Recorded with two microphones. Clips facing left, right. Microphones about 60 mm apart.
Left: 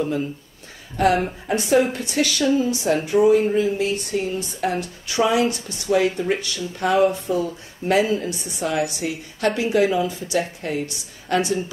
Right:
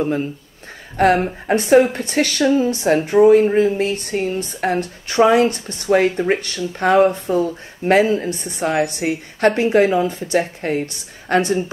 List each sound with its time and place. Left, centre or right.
0.0 s a woman's voice: right